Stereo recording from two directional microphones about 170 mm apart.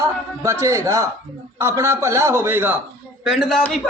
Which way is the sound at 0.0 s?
15° right (ahead or behind).